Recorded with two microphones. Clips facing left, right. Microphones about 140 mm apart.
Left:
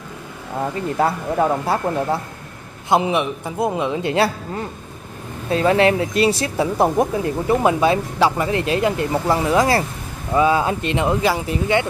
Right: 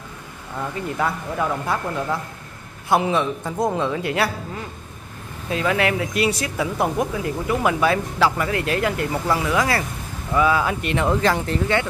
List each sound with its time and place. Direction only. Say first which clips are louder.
0.6 s speech: left 5 dB; 35° left (ahead or behind)
2.9 s a man's voice: left 2 dB; 20° left (ahead or behind)
5.5 s speech: left 6 dB; 35° left (ahead or behind); by 11.8 s 10° left (ahead or behind)